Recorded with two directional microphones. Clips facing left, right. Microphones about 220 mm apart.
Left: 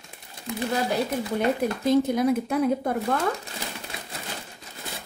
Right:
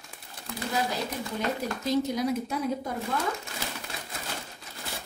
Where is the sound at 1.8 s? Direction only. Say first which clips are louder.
Left 6 dB; 55° left (ahead or behind).